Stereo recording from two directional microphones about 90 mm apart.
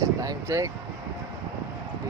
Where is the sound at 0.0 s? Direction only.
40° right (ahead or behind).